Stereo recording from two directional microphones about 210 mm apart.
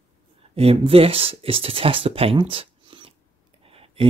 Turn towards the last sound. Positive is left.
turn(degrees=-25)  # may be behind; listen again after turning